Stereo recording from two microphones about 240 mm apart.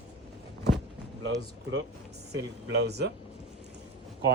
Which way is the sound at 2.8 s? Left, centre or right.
Right.